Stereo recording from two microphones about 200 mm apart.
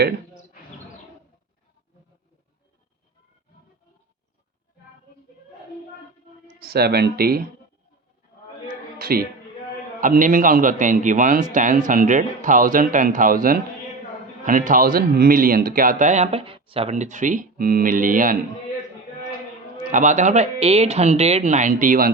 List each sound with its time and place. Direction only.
6.5 s speech: 50° right (ahead or behind)
9.0 s a woman's voice: 50° right (ahead or behind)
19.8 s speech: 40° right (ahead or behind)